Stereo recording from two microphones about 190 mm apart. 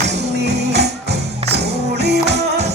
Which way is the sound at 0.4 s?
60° right (ahead or behind).